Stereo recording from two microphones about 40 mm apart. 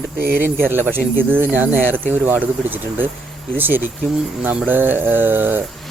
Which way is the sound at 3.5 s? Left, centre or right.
Right.